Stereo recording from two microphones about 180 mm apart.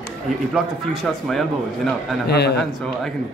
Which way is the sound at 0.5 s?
Centre (ahead or behind).